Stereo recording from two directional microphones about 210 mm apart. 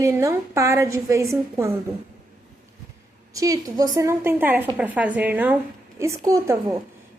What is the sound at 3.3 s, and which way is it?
A woman's voice, 15° right (ahead or behind).